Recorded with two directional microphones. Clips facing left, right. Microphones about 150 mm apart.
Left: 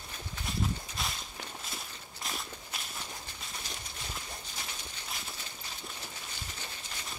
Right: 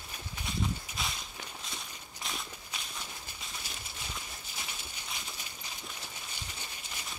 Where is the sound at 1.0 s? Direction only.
Centre (ahead or behind).